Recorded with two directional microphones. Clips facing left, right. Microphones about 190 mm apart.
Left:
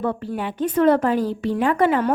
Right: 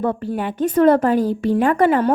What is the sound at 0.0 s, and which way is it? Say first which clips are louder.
A woman's voice: right 3 dB; 45° right (ahead or behind).